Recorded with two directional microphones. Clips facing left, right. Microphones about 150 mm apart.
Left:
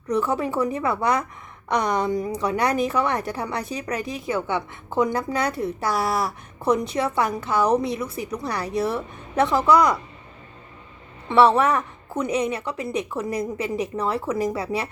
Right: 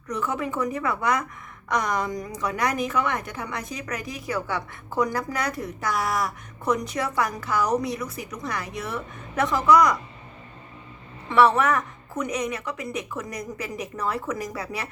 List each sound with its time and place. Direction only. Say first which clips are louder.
0.1 s a woman's voice: left 5 dB; 30° left (ahead or behind)
11.3 s a woman's voice: left 2 dB; 30° left (ahead or behind)